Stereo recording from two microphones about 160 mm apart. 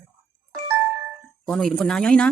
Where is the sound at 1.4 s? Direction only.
5° left (ahead or behind).